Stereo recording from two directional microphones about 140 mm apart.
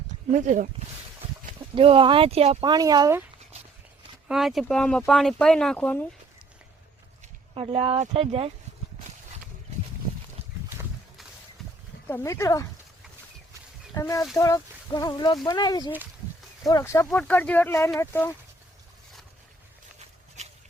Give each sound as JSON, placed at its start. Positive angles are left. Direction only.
{"t": 0.3, "sound": "speech", "side_deg": -60}
{"t": 1.7, "sound": "speech", "side_deg": -40}
{"t": 2.6, "sound": "a woman's voice", "side_deg": -30}
{"t": 4.3, "sound": "speech", "side_deg": 0}
{"t": 7.5, "sound": "speech", "side_deg": -45}
{"t": 12.0, "sound": "speech", "side_deg": 20}
{"t": 13.9, "sound": "speech", "side_deg": 25}
{"t": 20.4, "sound": "a sound", "side_deg": -55}